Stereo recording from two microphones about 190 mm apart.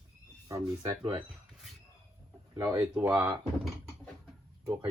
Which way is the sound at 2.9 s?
5° right (ahead or behind).